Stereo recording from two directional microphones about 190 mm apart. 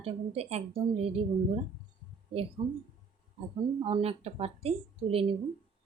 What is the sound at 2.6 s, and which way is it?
Speech, 25° right (ahead or behind).